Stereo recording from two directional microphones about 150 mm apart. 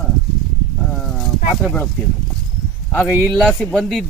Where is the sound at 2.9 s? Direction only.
10° left (ahead or behind).